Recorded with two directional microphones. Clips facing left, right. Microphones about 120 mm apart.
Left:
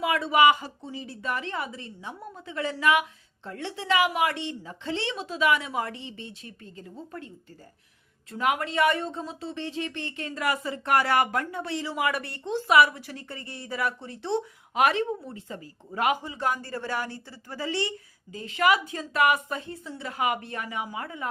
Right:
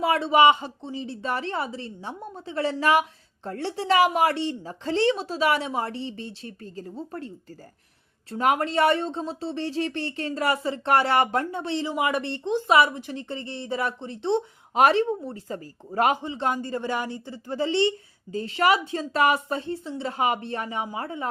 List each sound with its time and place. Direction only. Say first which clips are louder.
0.0 s a woman's voice: right 3 dB; 30° right (ahead or behind)
8.3 s speech: right 4 dB; 35° right (ahead or behind); by 14.8 s 20° right (ahead or behind)
14.8 s speech: right 4 dB; 35° right (ahead or behind)